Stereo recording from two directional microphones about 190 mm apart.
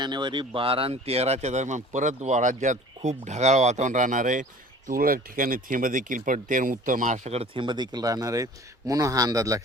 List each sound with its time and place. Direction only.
0.0 s speech: 25° right (ahead or behind)